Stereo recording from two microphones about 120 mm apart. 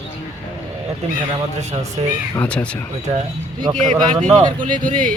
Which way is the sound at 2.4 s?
10° left (ahead or behind).